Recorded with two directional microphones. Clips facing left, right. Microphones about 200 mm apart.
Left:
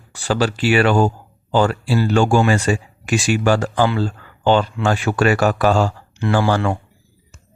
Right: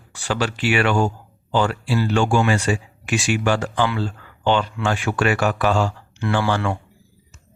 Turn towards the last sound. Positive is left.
turn(degrees=40)  # may be behind; listen again after turning